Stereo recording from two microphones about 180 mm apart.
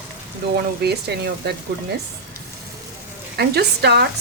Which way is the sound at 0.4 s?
65° right (ahead or behind).